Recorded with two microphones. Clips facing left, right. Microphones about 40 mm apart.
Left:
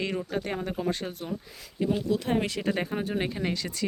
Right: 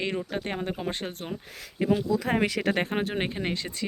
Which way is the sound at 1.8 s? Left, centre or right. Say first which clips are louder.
Right 3 dB; right.